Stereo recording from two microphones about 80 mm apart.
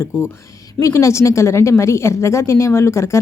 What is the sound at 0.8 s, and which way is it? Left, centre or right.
A woman's voice, left.